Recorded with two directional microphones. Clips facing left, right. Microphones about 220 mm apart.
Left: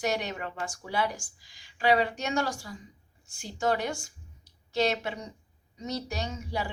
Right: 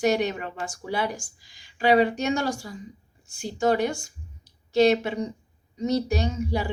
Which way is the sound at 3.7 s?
15° right (ahead or behind).